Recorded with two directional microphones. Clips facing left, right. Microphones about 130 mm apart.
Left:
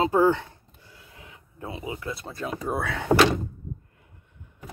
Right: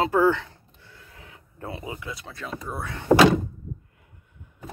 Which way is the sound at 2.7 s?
80° left.